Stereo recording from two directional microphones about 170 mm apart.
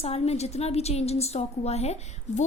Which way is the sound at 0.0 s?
35° left (ahead or behind).